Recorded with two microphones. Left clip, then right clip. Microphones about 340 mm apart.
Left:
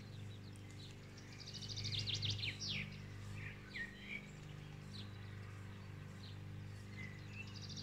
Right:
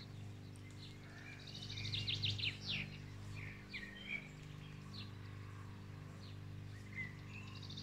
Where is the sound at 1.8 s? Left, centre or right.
Centre.